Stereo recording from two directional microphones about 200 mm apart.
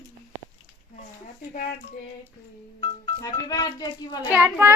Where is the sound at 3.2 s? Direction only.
20° left (ahead or behind).